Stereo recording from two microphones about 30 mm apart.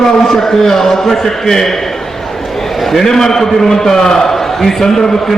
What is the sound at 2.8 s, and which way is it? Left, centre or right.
A man's voice, centre.